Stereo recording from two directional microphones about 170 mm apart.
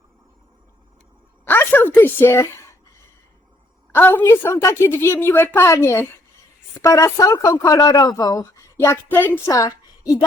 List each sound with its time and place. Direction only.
1.5 s a woman's voice: 10° left (ahead or behind)
3.9 s a woman's voice: 10° left (ahead or behind)